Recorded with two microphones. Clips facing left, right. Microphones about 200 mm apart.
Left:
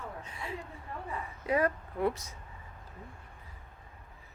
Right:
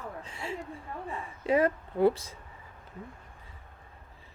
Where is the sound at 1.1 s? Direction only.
25° right (ahead or behind).